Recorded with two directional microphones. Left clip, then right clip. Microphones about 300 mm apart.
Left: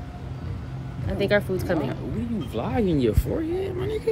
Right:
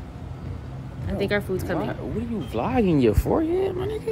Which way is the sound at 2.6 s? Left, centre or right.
Centre.